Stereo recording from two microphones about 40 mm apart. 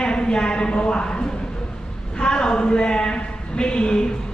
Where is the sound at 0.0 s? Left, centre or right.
Left.